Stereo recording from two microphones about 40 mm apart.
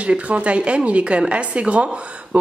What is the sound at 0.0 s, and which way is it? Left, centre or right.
Speech, right.